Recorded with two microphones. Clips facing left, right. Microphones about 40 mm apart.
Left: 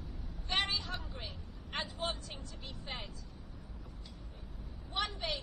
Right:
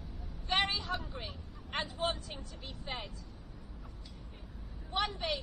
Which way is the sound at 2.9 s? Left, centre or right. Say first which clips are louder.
Right 3 dB; centre.